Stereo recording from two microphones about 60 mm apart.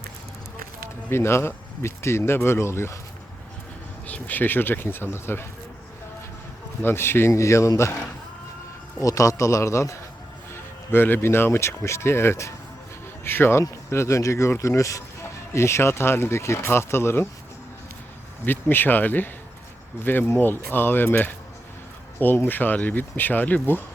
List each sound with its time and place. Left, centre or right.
1.1 s speech: left
4.0 s speech: left
6.8 s speech: left
7.3 s a man's voice: left
9.0 s a man's voice: left
10.5 s a man's voice: left
15.5 s speech: left
18.4 s speech: left
22.4 s speech: left